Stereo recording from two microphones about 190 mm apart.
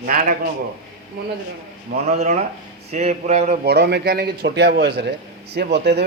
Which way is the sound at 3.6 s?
60° right (ahead or behind).